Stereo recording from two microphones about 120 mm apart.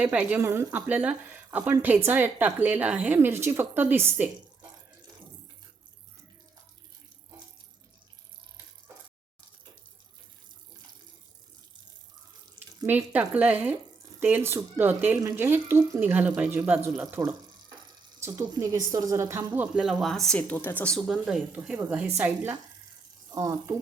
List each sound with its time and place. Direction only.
0.0 s a woman's voice: 10° right (ahead or behind)
12.5 s a woman's voice: 15° right (ahead or behind)
18.2 s a sound: 25° right (ahead or behind)
18.6 s a woman's voice: 30° right (ahead or behind); by 20.9 s 15° left (ahead or behind)
20.9 s speech: centre (ahead or behind)
21.8 s a woman's voice: 15° right (ahead or behind)
23.3 s speech: 25° right (ahead or behind)